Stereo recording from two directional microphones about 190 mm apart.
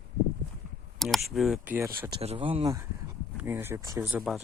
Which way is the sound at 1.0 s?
Centre (ahead or behind).